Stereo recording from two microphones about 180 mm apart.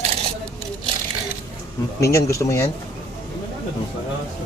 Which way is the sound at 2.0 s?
15° left (ahead or behind).